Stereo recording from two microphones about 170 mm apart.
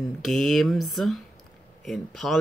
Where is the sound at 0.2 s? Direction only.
Centre (ahead or behind).